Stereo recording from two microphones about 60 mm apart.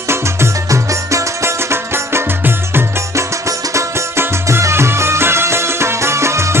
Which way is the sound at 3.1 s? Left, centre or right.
Right.